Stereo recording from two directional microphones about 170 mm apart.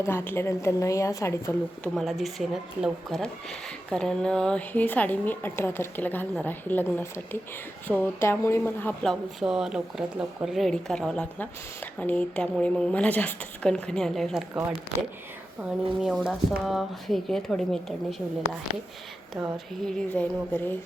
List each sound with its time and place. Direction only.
0.0 s a woman's voice: 15° left (ahead or behind)
2.0 s a woman's voice: centre (ahead or behind)
9.4 s speech: 5° right (ahead or behind)
16.0 s speech: centre (ahead or behind)
19.4 s a woman's voice: 5° left (ahead or behind)